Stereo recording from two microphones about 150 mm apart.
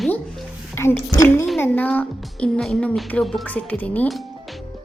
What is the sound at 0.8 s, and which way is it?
Speech, 15° left (ahead or behind).